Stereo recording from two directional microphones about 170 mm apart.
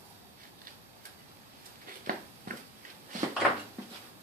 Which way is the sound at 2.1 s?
55° right (ahead or behind).